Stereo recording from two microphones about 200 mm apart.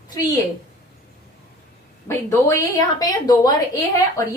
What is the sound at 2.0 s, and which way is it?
A woman's voice, 15° left (ahead or behind).